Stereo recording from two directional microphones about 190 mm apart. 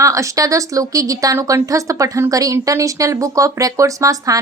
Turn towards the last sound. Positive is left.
turn(degrees=-15)  # may be behind; listen again after turning